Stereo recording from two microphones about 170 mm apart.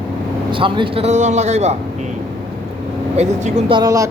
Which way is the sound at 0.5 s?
30° right (ahead or behind).